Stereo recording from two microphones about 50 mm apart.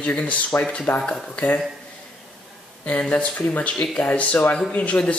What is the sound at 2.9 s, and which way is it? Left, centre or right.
Speech, left.